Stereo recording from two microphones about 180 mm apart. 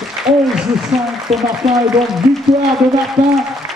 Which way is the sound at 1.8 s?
Centre (ahead or behind).